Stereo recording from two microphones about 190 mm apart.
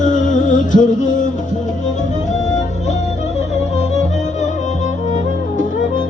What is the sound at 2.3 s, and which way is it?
Music, 40° left (ahead or behind).